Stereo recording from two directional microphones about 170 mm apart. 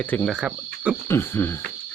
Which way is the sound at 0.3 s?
5° right (ahead or behind).